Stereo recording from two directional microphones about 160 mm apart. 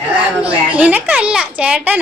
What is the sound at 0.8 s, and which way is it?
A woman's voice, 10° right (ahead or behind).